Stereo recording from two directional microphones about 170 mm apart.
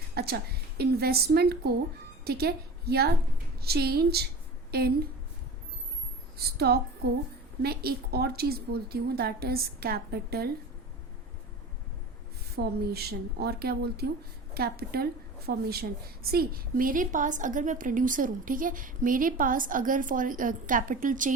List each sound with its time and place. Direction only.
0.1 s a woman's voice: 65° right (ahead or behind)
6.6 s a woman's voice: 65° right (ahead or behind)
12.5 s a woman's voice: 65° right (ahead or behind); by 21.3 s 50° right (ahead or behind)